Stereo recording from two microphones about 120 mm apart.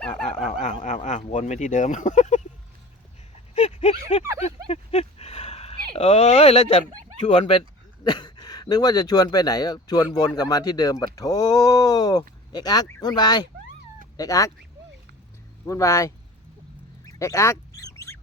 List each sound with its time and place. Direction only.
0.3 s a sound: 80° left
3.5 s a sound: 65° left (ahead or behind)
7.3 s speech: 65° left (ahead or behind)
8.0 s speech: 40° left (ahead or behind)
15.6 s speech: 25° left (ahead or behind)
17.1 s duck: 25° left (ahead or behind)